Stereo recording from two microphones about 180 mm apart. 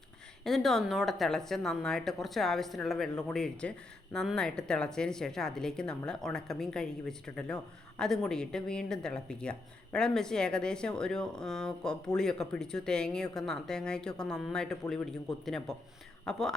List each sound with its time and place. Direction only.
0.4 s a woman's voice: centre (ahead or behind)